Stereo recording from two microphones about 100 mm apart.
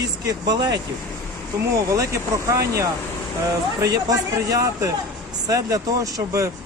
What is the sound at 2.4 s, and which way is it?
Speech, 30° right (ahead or behind).